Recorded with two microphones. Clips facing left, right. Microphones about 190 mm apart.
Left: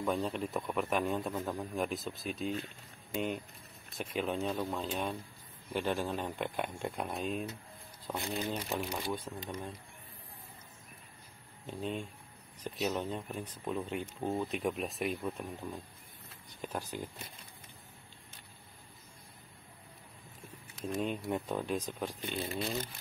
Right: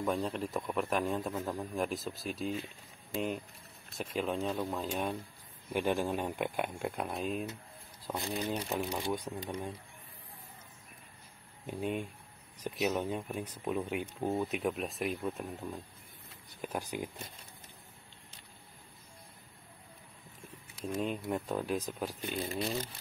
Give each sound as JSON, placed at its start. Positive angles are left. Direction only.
{"t": 0.0, "sound": "a man's voice", "side_deg": 0}
{"t": 11.6, "sound": "speech", "side_deg": -10}
{"t": 16.6, "sound": "speech", "side_deg": -10}
{"t": 20.7, "sound": "a man's voice", "side_deg": 0}